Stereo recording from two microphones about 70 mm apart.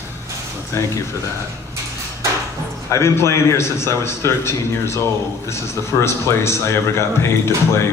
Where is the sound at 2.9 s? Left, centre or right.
Left.